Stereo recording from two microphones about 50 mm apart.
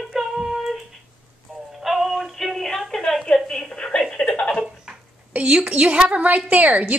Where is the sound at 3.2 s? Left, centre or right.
Centre.